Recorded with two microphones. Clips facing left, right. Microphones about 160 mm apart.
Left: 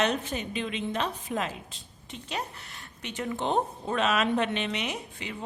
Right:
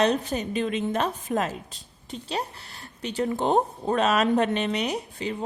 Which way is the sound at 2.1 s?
35° right (ahead or behind).